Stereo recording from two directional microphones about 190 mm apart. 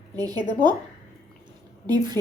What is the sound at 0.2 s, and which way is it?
Speech, 20° right (ahead or behind).